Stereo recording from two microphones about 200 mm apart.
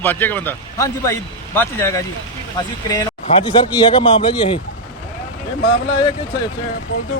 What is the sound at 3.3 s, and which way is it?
Speech, 25° left (ahead or behind).